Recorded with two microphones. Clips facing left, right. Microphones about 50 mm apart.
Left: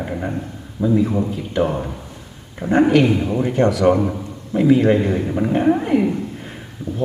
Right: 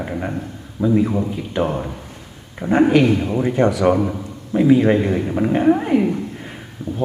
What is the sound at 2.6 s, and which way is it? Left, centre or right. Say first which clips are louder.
Speech: right 1 dB; right.